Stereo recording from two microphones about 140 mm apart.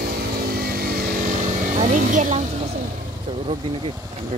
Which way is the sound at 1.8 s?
65° right (ahead or behind).